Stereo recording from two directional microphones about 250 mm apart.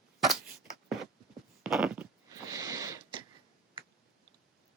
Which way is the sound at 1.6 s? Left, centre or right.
Centre.